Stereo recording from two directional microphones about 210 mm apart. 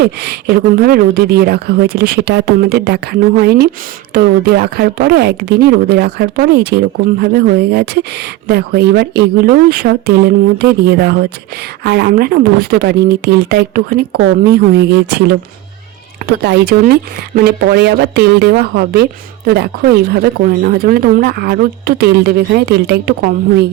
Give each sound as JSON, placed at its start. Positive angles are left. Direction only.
{"t": 0.0, "sound": "speech", "side_deg": -50}
{"t": 16.4, "sound": "speech", "side_deg": -50}
{"t": 20.1, "sound": "speech", "side_deg": -45}